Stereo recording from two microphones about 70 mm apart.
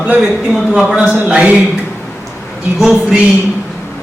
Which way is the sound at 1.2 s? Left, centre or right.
Centre.